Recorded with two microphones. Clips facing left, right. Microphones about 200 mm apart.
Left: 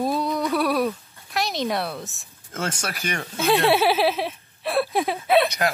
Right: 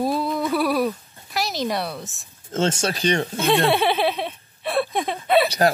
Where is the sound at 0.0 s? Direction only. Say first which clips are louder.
Right 1 dB; centre (ahead or behind).